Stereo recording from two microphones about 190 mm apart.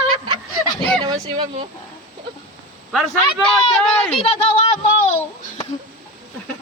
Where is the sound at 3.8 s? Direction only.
5° left (ahead or behind).